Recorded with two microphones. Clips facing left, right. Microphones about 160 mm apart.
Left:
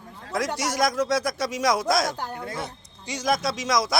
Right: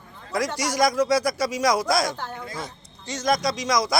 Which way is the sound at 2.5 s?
65° left (ahead or behind).